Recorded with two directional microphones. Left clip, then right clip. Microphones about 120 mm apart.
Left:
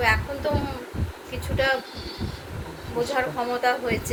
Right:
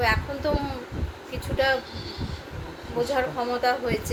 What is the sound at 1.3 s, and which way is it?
Speech, 35° right (ahead or behind).